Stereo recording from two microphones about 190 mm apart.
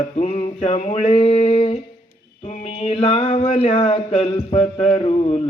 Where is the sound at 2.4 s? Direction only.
35° left (ahead or behind).